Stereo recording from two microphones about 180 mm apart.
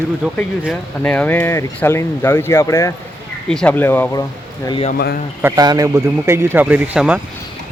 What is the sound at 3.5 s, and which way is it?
Speech, 5° left (ahead or behind).